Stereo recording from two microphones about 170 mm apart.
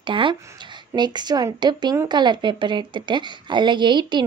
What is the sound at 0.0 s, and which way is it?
A woman's voice, 30° right (ahead or behind).